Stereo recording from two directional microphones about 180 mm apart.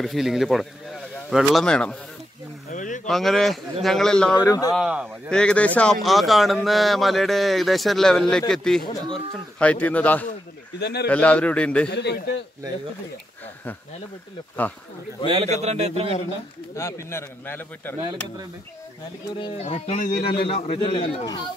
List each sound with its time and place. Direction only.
0.0 s speech: centre (ahead or behind)
2.7 s a sound: 45° left (ahead or behind)
3.1 s speech: centre (ahead or behind)
4.4 s speech: 20° left (ahead or behind)
4.7 s speech: 5° right (ahead or behind)
5.3 s speech: 5° left (ahead or behind)
10.8 s a man's voice: 65° left (ahead or behind)
11.1 s speech: 5° left (ahead or behind)
11.9 s a man's voice: 70° left (ahead or behind)
15.2 s a man's voice: 35° right (ahead or behind)
16.7 s speech: 15° left (ahead or behind)
19.4 s speech: 35° left (ahead or behind); by 20.4 s 55° left (ahead or behind)
20.4 s speech: 35° left (ahead or behind)